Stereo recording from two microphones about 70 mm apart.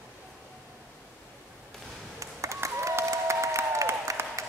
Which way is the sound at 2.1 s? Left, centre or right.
Right.